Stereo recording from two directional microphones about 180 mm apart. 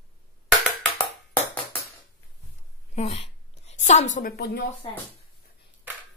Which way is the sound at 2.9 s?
35° left (ahead or behind).